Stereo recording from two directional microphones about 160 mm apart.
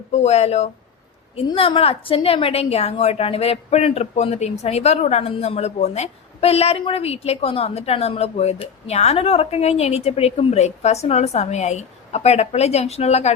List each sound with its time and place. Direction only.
0.1 s a woman's voice: 40° left (ahead or behind)